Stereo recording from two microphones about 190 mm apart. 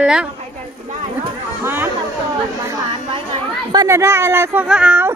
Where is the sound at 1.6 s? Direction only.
10° right (ahead or behind).